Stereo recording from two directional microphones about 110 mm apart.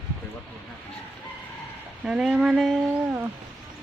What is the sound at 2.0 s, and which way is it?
Speech, 5° right (ahead or behind).